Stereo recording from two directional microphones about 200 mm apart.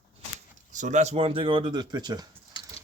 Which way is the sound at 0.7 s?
40° right (ahead or behind).